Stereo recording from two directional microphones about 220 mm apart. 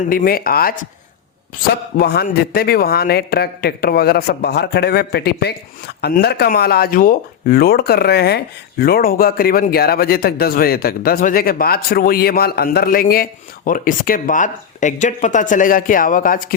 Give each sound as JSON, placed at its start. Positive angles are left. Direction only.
{"t": 0.1, "sound": "speech", "side_deg": 40}
{"t": 2.0, "sound": "a man's voice", "side_deg": 45}